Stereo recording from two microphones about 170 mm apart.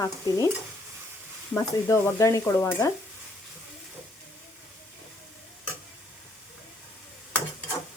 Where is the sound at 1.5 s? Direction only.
15° left (ahead or behind).